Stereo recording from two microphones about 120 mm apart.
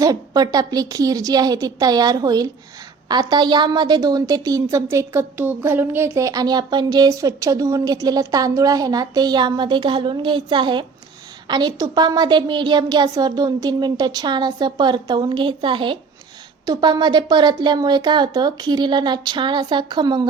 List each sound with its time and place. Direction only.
0.0 s a woman's voice: 35° right (ahead or behind)